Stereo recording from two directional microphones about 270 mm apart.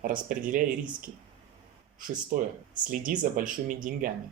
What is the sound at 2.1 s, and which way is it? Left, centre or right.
Speech, right.